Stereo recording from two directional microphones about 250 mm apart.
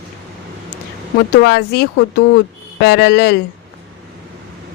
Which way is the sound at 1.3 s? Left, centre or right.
Left.